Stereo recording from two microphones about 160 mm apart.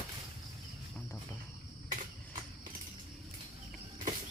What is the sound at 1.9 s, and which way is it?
Cricket, 55° right (ahead or behind).